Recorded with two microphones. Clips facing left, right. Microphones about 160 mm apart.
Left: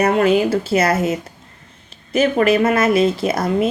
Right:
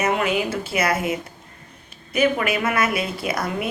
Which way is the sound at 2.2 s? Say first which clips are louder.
Left 6 dB; 30° left (ahead or behind).